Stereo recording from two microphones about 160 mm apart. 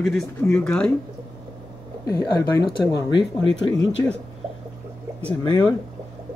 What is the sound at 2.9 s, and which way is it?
Speech, 90° left.